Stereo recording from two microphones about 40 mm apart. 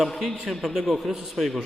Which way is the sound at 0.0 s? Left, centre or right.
Centre.